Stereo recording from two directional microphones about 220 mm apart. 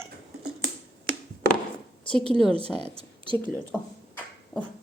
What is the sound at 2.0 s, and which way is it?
Speech, 5° left (ahead or behind).